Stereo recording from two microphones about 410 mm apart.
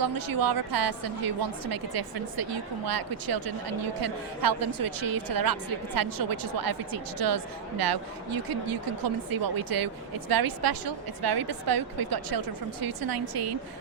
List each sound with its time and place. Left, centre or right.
0.0 s a woman's voice: right